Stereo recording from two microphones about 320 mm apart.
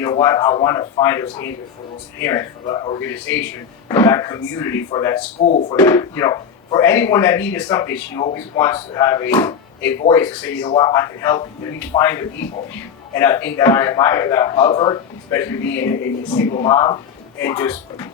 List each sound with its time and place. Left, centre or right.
0.0 s speech: centre